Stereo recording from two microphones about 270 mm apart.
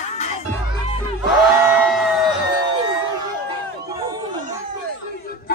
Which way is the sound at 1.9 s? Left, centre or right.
Centre.